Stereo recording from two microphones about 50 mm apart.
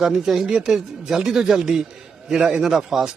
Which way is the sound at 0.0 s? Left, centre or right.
Centre.